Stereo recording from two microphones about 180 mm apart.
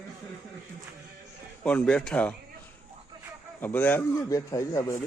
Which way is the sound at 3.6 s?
10° left (ahead or behind).